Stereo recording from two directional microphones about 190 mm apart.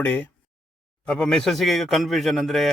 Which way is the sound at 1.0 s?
5° left (ahead or behind).